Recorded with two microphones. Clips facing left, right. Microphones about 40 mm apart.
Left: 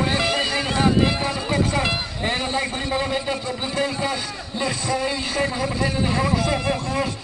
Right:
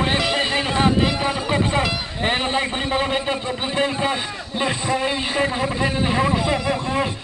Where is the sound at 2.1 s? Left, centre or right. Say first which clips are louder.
Right 3 dB; right.